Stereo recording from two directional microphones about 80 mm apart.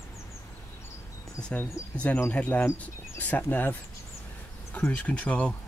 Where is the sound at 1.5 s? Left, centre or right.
Centre.